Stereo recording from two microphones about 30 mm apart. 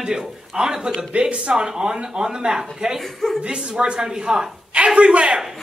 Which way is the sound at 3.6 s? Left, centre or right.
Right.